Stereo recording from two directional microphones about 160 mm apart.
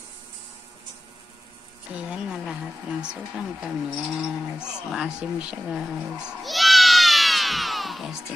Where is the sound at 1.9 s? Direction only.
10° right (ahead or behind).